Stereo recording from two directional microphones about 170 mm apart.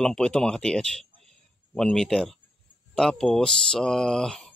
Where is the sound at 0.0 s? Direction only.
5° left (ahead or behind).